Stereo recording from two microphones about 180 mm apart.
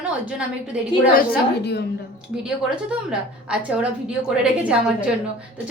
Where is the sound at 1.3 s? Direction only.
65° left (ahead or behind).